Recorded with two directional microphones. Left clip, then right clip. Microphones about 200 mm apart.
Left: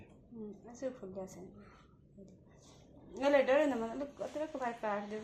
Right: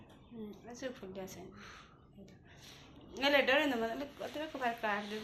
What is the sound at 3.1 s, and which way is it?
A woman's voice, 40° left (ahead or behind).